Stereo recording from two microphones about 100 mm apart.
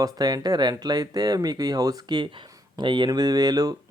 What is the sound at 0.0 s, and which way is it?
Speech, 40° right (ahead or behind).